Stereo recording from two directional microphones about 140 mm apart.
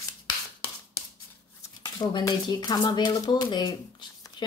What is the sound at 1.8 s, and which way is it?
Speech, 25° left (ahead or behind).